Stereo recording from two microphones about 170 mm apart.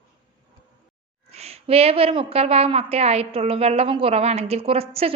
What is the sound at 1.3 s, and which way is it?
A woman's voice, 35° right (ahead or behind).